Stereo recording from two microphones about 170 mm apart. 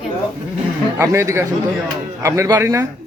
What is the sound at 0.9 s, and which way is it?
Speech, 15° right (ahead or behind).